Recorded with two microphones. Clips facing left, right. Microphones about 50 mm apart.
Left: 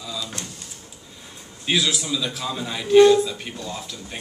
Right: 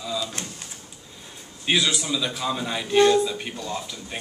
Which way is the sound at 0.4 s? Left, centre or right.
Right.